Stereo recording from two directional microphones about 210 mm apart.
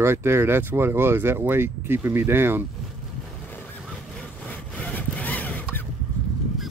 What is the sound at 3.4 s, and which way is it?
Vehicle, 5° left (ahead or behind).